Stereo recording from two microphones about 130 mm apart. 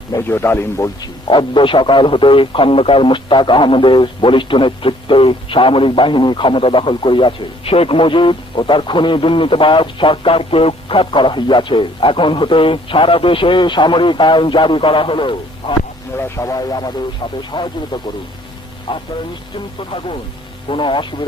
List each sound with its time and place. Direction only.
0.1 s a man's voice: 20° left (ahead or behind)
1.0 s speech: 40° left (ahead or behind)
16.1 s speech: 20° left (ahead or behind); by 19.0 s 40° left (ahead or behind)
20.7 s speech: 40° left (ahead or behind)